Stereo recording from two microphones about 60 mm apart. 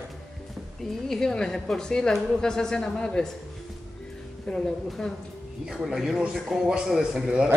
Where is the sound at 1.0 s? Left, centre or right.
Centre.